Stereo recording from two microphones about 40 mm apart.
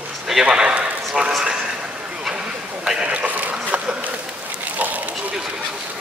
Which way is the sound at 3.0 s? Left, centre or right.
Right.